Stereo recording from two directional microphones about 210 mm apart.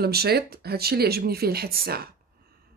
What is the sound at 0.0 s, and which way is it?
Speech, 50° right (ahead or behind).